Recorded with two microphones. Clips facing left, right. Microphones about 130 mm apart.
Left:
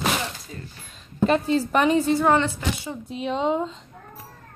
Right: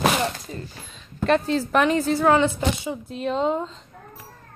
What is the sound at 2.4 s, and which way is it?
Speech, 20° right (ahead or behind).